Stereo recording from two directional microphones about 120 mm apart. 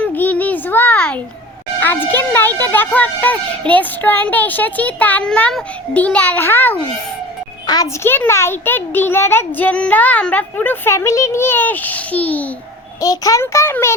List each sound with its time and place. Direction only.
0.0 s a sound: 15° left (ahead or behind)
1.8 s speech: 15° left (ahead or behind)
7.7 s a child's voice: 35° left (ahead or behind)
8.0 s speech: 20° left (ahead or behind)
13.0 s a child's voice: 30° left (ahead or behind)